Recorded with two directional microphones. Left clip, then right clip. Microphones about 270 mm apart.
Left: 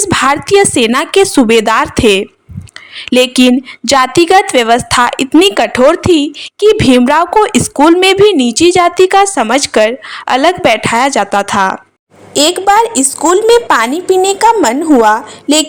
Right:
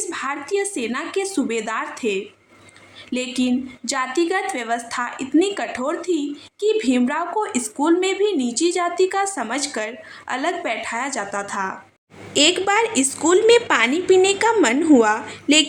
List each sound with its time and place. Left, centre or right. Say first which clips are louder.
0.0 s a woman's voice: left 16 dB; left
12.3 s a woman's voice: left 9 dB; centre